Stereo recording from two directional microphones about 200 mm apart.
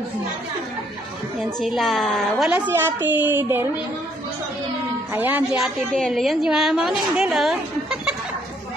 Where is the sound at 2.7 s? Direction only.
10° right (ahead or behind).